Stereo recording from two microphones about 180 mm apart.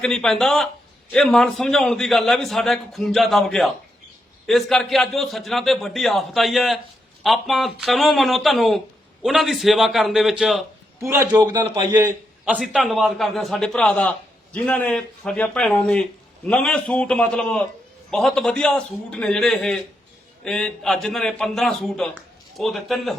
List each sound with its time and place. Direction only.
0.0 s a man's voice: 5° left (ahead or behind)
11.0 s a man's voice: 15° right (ahead or behind)
11.9 s a man's voice: 10° right (ahead or behind)